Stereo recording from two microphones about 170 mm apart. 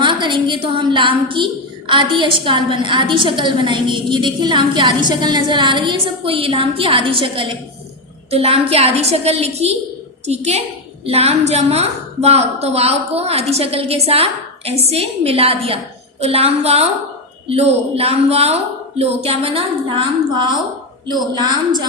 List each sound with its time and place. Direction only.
0.0 s a woman's voice: 30° right (ahead or behind)